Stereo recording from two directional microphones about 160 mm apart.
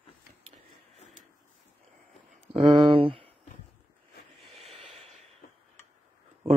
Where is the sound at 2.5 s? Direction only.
35° right (ahead or behind).